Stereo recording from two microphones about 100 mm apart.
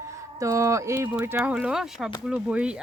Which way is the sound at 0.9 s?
20° right (ahead or behind).